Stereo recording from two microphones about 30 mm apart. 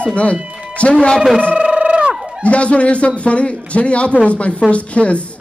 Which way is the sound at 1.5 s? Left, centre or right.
Right.